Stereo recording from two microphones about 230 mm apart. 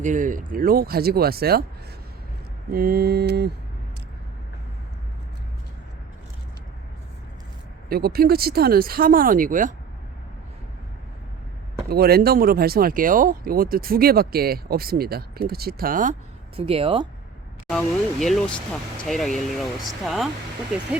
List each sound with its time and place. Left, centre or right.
0.0 s speech: right
2.7 s mantra: right
7.9 s speech: right
11.9 s speech: right
16.6 s speech: right
17.7 s speech: centre